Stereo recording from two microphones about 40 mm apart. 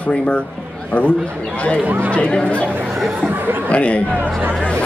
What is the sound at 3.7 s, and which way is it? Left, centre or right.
Speech, left.